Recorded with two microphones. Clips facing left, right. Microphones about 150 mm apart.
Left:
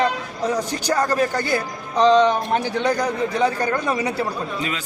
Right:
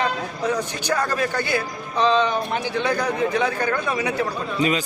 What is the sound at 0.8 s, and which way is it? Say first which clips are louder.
Speech: left 5 dB; 35° left (ahead or behind).